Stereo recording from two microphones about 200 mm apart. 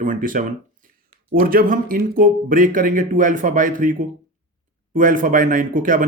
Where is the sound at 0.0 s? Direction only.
40° right (ahead or behind).